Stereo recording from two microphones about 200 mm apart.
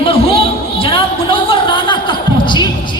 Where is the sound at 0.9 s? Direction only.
25° left (ahead or behind).